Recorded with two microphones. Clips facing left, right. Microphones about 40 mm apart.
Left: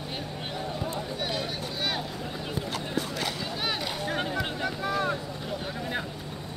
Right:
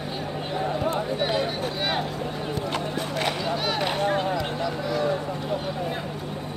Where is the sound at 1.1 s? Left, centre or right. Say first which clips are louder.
Right 7 dB; right.